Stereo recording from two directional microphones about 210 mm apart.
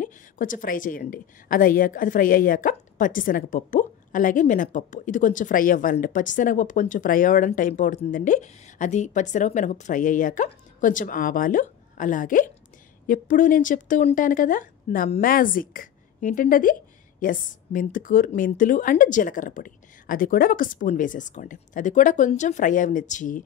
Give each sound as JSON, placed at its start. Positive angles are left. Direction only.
{"t": 0.0, "sound": "a woman's voice", "side_deg": 40}